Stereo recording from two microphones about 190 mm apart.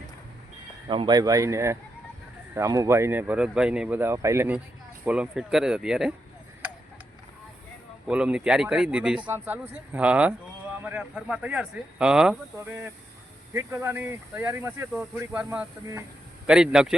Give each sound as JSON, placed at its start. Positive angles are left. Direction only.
{"t": 0.9, "sound": "speech", "side_deg": -25}
{"t": 8.0, "sound": "speech", "side_deg": -5}